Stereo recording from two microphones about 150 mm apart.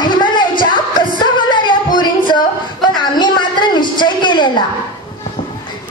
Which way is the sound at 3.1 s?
30° left (ahead or behind).